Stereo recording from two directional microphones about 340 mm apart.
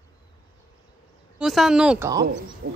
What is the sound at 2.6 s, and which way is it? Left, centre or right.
Speech, right.